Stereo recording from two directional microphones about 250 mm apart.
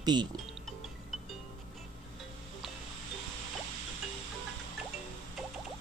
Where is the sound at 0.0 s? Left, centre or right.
Centre.